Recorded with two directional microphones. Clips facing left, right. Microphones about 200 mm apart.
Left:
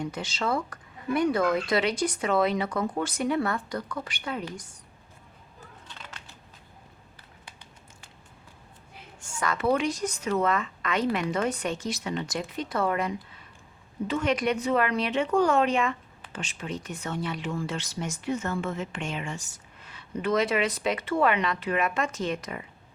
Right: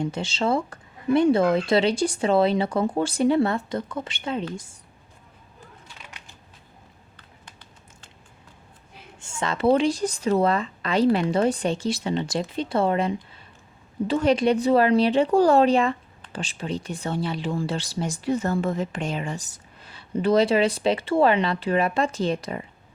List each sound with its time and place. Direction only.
0.0 s speech: 25° right (ahead or behind)
5.9 s a sound: 10° right (ahead or behind)
9.2 s speech: 25° right (ahead or behind)